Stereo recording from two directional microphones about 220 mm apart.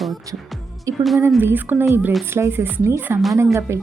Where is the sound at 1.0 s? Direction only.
Centre (ahead or behind).